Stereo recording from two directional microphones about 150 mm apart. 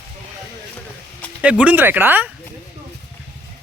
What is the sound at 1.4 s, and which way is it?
Speech, 10° right (ahead or behind).